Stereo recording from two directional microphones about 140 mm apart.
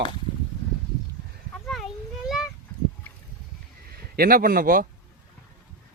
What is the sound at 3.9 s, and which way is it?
Speech, 90° right.